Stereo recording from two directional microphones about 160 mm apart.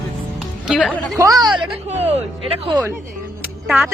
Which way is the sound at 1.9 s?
40° right (ahead or behind).